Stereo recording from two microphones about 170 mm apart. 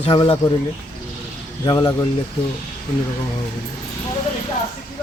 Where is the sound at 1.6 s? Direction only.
25° left (ahead or behind).